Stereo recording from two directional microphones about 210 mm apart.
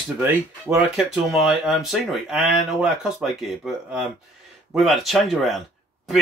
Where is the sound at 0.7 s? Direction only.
Centre (ahead or behind).